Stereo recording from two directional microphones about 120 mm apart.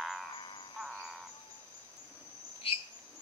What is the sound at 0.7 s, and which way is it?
Owl, 5° right (ahead or behind).